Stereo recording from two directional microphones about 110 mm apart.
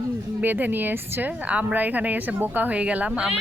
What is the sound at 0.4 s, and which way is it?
Speech, 15° right (ahead or behind).